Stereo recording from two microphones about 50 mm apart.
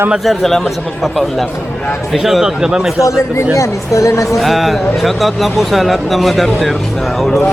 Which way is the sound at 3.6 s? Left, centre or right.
Left.